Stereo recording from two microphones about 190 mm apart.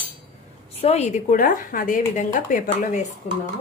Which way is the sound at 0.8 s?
35° left (ahead or behind).